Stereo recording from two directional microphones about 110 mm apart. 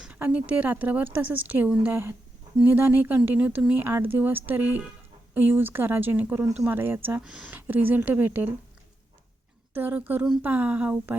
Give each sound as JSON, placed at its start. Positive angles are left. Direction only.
{"t": 0.0, "sound": "speech", "side_deg": -10}
{"t": 9.7, "sound": "speech", "side_deg": -15}